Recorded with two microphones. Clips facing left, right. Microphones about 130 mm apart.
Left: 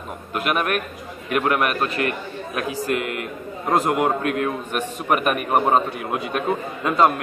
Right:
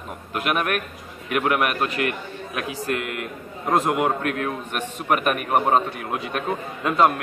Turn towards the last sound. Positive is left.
turn(degrees=0)  # may be behind; listen again after turning